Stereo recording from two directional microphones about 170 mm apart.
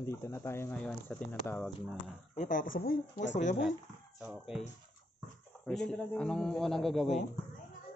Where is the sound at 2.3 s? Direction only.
50° left (ahead or behind).